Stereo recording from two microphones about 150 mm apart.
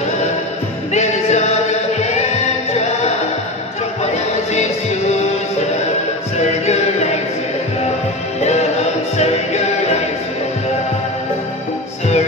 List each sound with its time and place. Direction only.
0.9 s music: 50° left (ahead or behind)
6.3 s music: 50° left (ahead or behind)
8.4 s music: 45° left (ahead or behind)